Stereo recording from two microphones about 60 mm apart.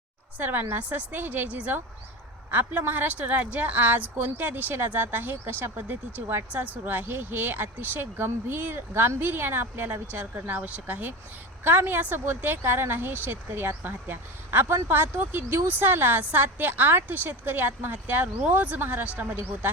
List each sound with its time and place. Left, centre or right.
0.3 s a woman's voice: right